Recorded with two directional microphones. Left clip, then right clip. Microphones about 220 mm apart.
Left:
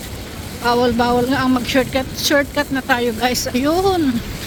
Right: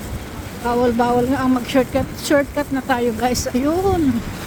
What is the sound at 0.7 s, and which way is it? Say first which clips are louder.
Speech: left 2 dB; centre (ahead or behind).